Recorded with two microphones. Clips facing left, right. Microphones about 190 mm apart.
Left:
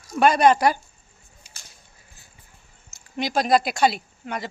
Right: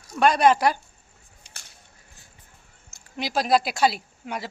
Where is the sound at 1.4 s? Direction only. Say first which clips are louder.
Right 4 dB; 5° left (ahead or behind).